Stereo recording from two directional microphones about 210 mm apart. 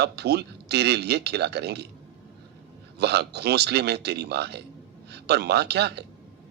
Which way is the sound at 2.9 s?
50° right (ahead or behind).